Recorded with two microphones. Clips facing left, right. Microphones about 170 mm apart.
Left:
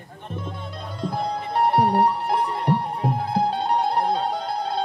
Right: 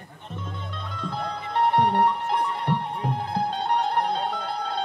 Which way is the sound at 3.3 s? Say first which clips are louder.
Left 3 dB; 10° left (ahead or behind).